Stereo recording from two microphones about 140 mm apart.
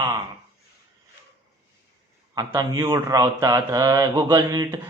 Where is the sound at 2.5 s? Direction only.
25° right (ahead or behind).